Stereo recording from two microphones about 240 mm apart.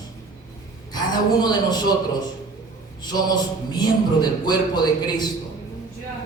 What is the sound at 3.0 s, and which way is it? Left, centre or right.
Speech, centre.